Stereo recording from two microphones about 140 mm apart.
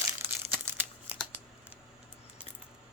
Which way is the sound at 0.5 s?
15° right (ahead or behind).